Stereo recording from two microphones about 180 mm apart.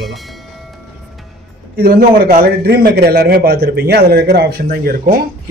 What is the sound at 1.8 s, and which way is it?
A man's voice, 55° right (ahead or behind).